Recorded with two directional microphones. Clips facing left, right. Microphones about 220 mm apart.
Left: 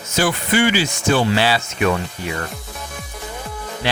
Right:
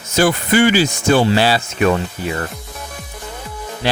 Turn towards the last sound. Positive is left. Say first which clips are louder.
# right 3 dB
turn(degrees=-40)  # may be behind; listen again after turning